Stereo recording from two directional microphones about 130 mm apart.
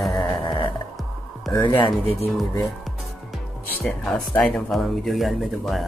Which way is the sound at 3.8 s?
5° left (ahead or behind).